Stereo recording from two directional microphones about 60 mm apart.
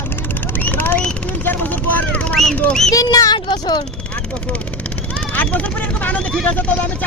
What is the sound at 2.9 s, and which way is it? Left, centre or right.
Speech, left.